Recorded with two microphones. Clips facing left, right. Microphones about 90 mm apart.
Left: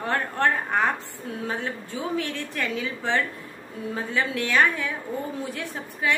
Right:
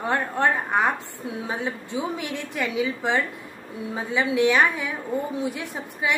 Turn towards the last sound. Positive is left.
turn(degrees=-15)  # may be behind; listen again after turning